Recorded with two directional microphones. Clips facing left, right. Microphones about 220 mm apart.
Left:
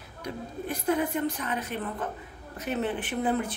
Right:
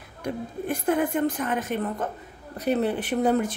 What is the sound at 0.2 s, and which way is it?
A woman's voice, 50° right (ahead or behind).